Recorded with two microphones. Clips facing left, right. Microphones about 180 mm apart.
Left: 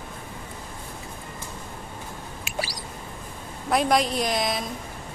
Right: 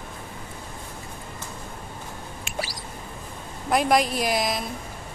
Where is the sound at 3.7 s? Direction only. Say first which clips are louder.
Right 1 dB; centre (ahead or behind).